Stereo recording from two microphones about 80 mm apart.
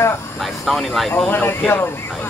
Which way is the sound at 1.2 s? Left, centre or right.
Left.